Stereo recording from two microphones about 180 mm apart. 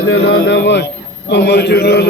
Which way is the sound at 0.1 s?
70° left (ahead or behind).